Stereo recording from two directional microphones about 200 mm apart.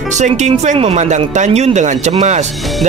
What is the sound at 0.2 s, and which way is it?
Speech, 35° right (ahead or behind).